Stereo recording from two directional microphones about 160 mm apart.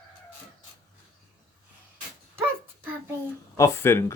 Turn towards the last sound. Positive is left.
turn(degrees=15)  # may be behind; listen again after turning